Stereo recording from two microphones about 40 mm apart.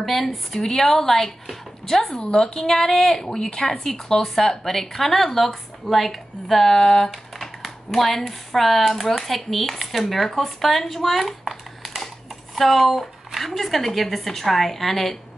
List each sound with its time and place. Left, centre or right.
0.0 s a woman's voice: centre